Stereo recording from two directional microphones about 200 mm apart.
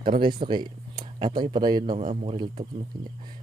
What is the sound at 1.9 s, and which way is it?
Speech, 35° right (ahead or behind).